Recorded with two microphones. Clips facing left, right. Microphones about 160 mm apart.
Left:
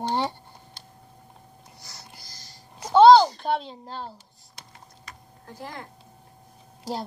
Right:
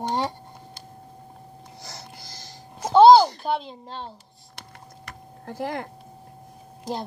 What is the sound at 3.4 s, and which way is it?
Speech, centre (ahead or behind).